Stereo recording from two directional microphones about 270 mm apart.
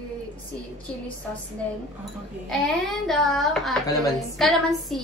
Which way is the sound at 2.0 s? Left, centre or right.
Centre.